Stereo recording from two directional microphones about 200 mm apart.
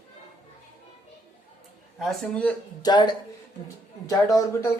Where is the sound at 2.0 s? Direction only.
5° left (ahead or behind).